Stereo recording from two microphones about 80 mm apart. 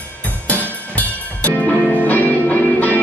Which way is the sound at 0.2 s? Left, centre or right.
Left.